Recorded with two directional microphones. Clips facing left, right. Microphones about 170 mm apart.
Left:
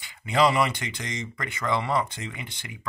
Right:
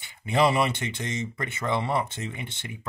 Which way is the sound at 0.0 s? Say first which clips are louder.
Left 1 dB; 25° right (ahead or behind).